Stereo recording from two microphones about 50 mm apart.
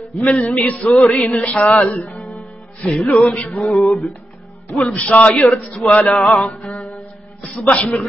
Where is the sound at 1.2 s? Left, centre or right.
Centre.